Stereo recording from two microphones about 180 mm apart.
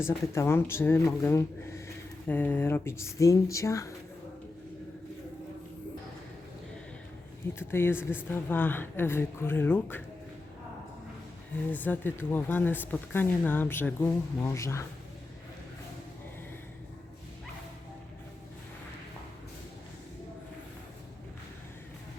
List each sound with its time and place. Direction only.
0.3 s speech: 15° left (ahead or behind)
7.6 s speech: 15° left (ahead or behind)
11.7 s speech: 10° left (ahead or behind)